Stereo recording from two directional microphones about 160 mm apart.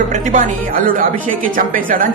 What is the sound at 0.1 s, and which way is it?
A man's voice, 50° right (ahead or behind).